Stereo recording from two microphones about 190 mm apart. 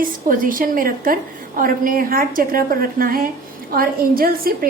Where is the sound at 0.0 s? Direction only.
45° right (ahead or behind).